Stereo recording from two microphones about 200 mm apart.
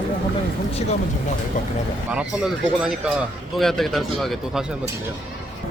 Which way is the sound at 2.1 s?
5° right (ahead or behind).